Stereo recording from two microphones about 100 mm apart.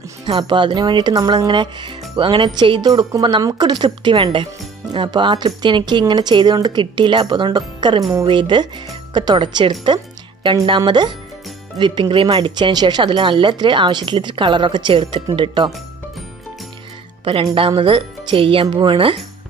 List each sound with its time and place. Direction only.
0.2 s speech: 50° right (ahead or behind)
1.1 s speech: 40° right (ahead or behind)
1.5 s speech: 55° right (ahead or behind)
2.9 s speech: 40° right (ahead or behind)
10.9 s speech: 50° right (ahead or behind)
12.4 s speech: 50° right (ahead or behind)
17.2 s speech: 70° right (ahead or behind)